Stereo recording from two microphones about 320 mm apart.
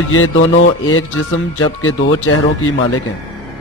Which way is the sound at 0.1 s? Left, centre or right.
Left.